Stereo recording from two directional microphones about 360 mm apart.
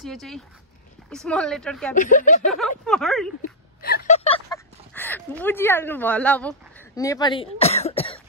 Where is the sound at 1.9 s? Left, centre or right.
Left.